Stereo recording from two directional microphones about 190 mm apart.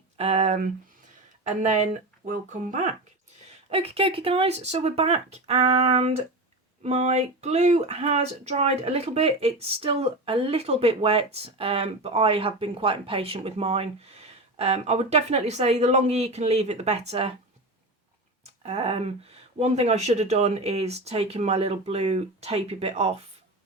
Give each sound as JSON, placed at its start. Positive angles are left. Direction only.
{"t": 0.2, "sound": "speech", "side_deg": -35}
{"t": 18.4, "sound": "speech", "side_deg": -30}